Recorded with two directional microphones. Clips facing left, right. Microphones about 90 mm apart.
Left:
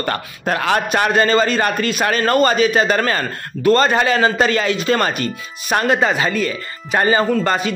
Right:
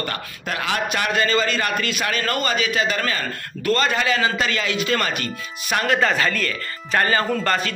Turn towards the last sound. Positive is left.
turn(degrees=15)  # may be behind; listen again after turning